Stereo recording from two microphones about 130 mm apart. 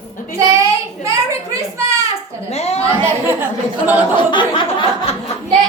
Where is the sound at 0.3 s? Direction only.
25° right (ahead or behind).